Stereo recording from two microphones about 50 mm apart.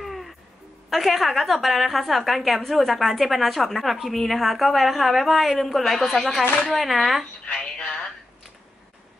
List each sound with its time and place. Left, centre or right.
0.0 s music: centre
0.8 s a woman's voice: centre
7.4 s a sound: left